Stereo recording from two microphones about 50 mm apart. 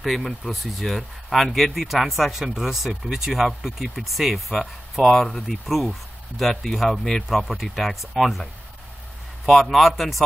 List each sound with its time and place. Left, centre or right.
0.0 s speech: centre
9.5 s speech: centre